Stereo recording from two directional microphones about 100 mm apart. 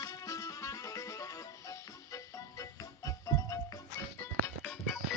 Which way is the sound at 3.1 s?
35° left (ahead or behind).